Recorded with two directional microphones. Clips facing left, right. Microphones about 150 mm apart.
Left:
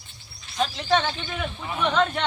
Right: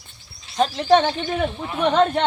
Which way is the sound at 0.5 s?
40° right (ahead or behind).